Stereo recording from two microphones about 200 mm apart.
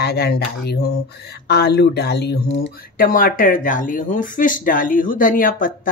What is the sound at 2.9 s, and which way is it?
Speech, 45° left (ahead or behind).